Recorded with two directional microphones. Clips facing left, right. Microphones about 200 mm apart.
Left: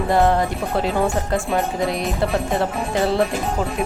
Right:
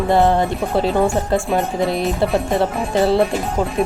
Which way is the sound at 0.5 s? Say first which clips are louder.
Right 3 dB; centre (ahead or behind).